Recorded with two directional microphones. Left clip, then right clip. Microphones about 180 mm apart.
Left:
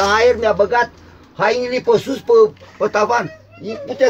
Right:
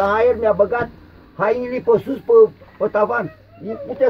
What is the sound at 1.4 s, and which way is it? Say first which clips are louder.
A man's voice: left 3 dB; centre (ahead or behind).